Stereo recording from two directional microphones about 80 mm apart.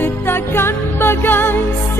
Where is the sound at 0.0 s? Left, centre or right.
Left.